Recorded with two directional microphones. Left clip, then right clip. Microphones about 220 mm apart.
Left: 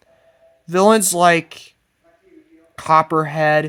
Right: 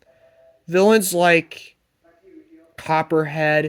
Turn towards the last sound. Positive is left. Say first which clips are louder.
# left 2 dB
turn(degrees=20)  # may be behind; listen again after turning